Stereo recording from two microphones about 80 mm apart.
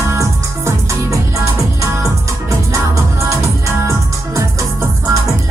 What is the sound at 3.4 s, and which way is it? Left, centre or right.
Music, right.